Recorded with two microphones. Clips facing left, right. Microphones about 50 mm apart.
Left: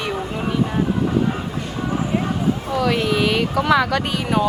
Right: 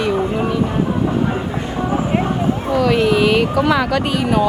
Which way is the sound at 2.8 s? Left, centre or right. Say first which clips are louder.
Right 6 dB; right.